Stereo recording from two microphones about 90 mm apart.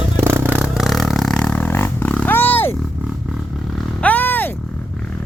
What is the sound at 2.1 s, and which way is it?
Roar, 20° left (ahead or behind).